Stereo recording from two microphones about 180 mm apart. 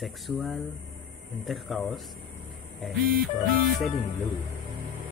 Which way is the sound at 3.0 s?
55° right (ahead or behind).